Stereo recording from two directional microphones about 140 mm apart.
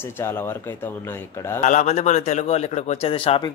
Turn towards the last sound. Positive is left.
turn(degrees=40)  # may be behind; listen again after turning